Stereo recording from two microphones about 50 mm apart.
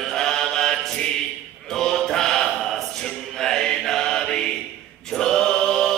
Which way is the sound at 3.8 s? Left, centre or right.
Centre.